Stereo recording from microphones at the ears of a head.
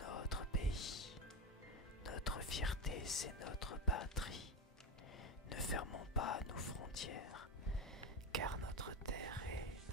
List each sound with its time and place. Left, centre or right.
0.0 s whispering: left
0.6 s music: left
2.0 s whispering: left
3.9 s speech: left
5.5 s whispering: left
8.3 s whispering: right